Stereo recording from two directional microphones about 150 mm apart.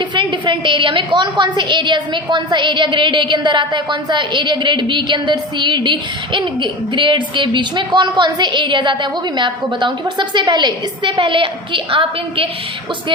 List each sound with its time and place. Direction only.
0.1 s a woman's voice: 30° right (ahead or behind)